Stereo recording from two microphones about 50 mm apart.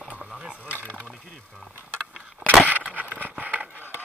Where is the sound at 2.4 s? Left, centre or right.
Right.